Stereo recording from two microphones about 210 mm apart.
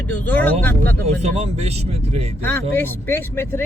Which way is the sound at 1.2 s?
30° right (ahead or behind).